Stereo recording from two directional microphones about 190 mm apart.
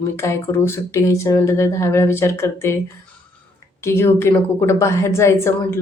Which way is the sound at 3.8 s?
15° left (ahead or behind).